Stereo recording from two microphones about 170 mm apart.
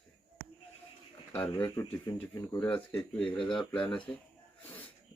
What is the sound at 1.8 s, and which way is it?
Speech, 20° left (ahead or behind).